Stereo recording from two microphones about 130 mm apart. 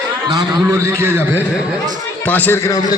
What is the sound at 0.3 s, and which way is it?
A man's voice, 25° right (ahead or behind).